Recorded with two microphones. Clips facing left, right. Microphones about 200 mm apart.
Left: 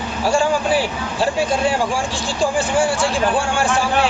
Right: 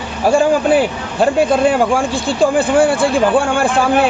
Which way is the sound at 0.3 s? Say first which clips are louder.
Right 6 dB; 55° right (ahead or behind).